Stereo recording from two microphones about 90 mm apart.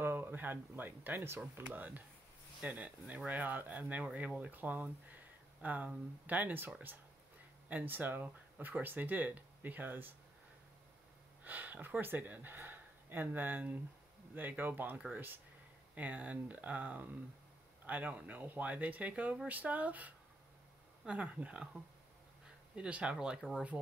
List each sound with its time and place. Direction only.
0.0 s speech: 25° right (ahead or behind)
7.7 s speech: 20° right (ahead or behind)
11.4 s speech: 20° right (ahead or behind)
22.8 s speech: 15° right (ahead or behind)